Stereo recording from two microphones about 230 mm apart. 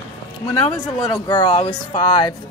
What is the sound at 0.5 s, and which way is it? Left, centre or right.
A woman's voice, centre.